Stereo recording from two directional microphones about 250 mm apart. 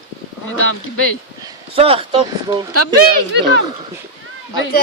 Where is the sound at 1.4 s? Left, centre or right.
Right.